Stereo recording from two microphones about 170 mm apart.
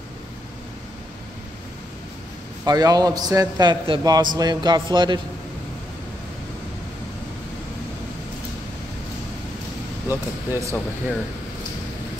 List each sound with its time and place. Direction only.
2.6 s a man's voice: 20° right (ahead or behind)
10.0 s speech: 15° right (ahead or behind)